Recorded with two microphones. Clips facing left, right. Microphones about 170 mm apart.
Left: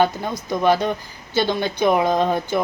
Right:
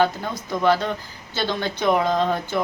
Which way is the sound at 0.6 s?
15° left (ahead or behind).